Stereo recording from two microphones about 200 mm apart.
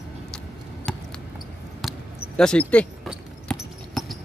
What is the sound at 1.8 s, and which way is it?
Basketball bounce, centre (ahead or behind).